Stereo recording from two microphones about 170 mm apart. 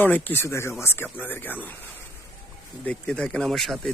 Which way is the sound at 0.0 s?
10° left (ahead or behind).